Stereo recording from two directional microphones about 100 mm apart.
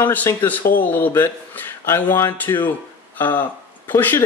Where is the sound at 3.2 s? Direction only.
20° left (ahead or behind).